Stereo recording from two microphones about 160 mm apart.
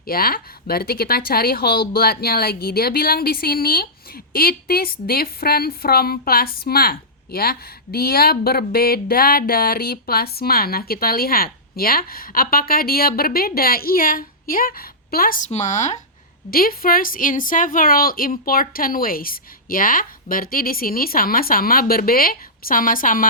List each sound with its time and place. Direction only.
0.0 s a woman's voice: 65° left (ahead or behind)
15.4 s speech: 45° left (ahead or behind)
16.5 s a woman's voice: 65° left (ahead or behind)